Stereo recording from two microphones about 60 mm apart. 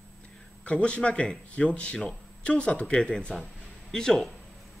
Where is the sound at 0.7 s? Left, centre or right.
Centre.